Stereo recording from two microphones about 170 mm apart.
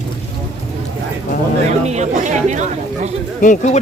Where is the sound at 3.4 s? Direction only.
45° left (ahead or behind).